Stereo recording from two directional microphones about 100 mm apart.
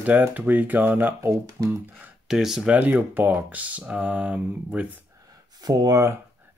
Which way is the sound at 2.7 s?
15° right (ahead or behind).